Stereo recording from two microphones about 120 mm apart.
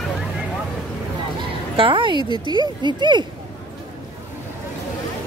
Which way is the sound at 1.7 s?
45° right (ahead or behind).